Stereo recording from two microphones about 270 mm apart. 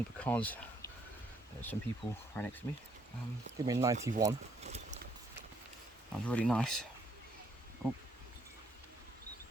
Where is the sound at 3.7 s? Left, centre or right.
Centre.